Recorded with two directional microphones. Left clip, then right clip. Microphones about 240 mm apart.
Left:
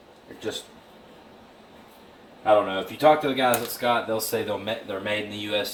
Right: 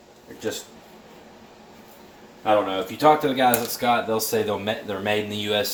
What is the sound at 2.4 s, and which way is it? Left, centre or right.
Speech, right.